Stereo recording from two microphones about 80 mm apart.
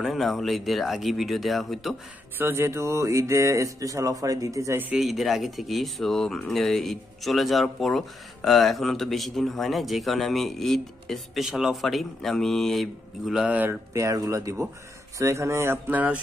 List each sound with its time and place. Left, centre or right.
0.0 s speech: centre
2.3 s speech: right
4.9 s speech: centre
13.5 s speech: right
13.9 s speech: right; by 16.2 s centre